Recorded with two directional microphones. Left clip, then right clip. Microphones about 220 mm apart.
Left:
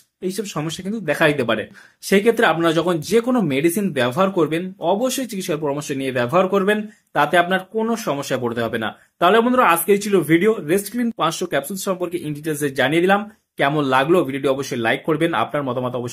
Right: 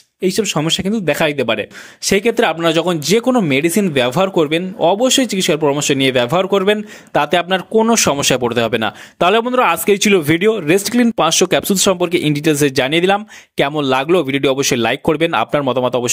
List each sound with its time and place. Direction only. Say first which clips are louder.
0.2 s speech: right 9 dB; 35° right (ahead or behind)